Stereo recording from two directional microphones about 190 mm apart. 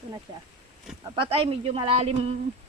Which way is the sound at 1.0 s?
25° right (ahead or behind).